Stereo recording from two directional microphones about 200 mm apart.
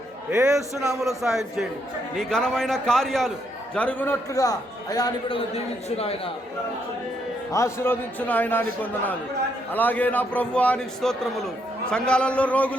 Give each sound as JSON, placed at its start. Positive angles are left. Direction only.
{"t": 0.3, "sound": "a man's voice", "side_deg": -15}
{"t": 1.0, "sound": "a man's voice", "side_deg": 0}
{"t": 5.5, "sound": "speech", "side_deg": 30}
{"t": 7.5, "sound": "a man's voice", "side_deg": 15}